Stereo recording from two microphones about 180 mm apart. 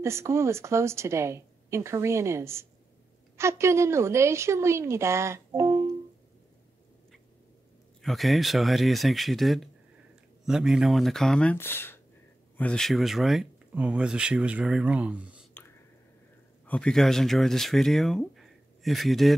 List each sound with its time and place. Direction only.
0.0 s a woman's voice: 15° right (ahead or behind)
8.0 s speech: centre (ahead or behind)
15.6 s whispering: 10° left (ahead or behind)
16.6 s speech: 5° left (ahead or behind)